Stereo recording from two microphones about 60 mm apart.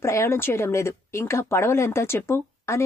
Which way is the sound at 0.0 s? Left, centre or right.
Left.